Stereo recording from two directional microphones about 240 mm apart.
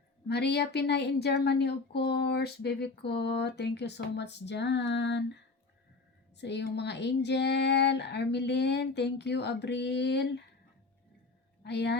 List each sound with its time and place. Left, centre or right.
0.3 s a woman's voice: left
11.6 s speech: left